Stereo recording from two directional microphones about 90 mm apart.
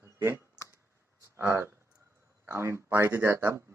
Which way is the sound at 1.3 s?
25° right (ahead or behind).